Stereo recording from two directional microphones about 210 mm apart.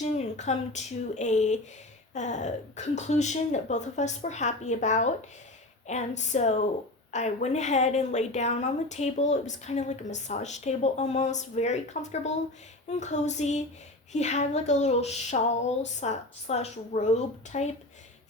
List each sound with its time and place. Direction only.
0.0 s a woman's voice: 35° left (ahead or behind)
12.9 s a woman's voice: 35° left (ahead or behind)